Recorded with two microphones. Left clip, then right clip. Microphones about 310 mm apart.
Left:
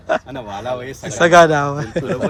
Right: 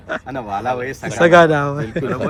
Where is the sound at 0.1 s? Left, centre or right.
Centre.